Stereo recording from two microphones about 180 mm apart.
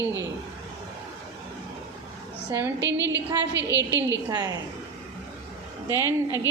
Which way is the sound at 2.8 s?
80° right.